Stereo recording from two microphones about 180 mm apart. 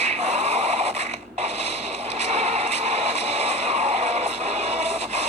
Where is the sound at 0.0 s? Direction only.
35° right (ahead or behind).